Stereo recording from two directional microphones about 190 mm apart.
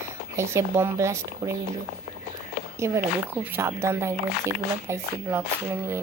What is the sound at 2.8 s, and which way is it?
Speech, 15° right (ahead or behind).